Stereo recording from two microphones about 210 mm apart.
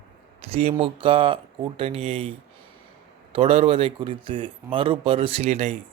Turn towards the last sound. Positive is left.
turn(degrees=-30)  # may be behind; listen again after turning